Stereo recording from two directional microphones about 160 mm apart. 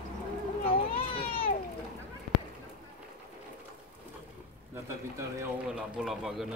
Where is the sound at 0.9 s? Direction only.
35° left (ahead or behind).